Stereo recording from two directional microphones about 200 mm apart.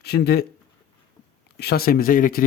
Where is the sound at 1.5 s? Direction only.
50° left (ahead or behind).